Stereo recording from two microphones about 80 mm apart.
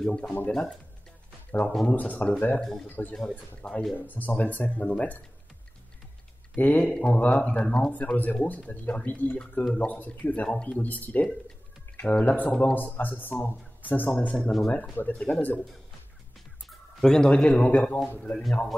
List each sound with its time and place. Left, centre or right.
0.0 s speech: centre
2.6 s a man's voice: centre
2.9 s speech: centre
3.9 s speech: left
6.5 s speech: left
16.6 s a man's voice: centre